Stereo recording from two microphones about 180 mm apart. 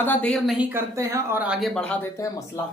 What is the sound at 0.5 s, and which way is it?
Speech, 10° right (ahead or behind).